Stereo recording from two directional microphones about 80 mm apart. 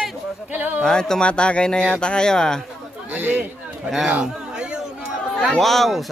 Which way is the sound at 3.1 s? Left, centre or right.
Centre.